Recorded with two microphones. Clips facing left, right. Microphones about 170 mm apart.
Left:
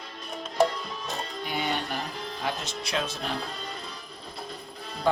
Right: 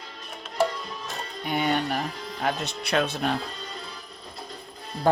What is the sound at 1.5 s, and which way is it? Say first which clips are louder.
Speech: right 6 dB; 55° right (ahead or behind).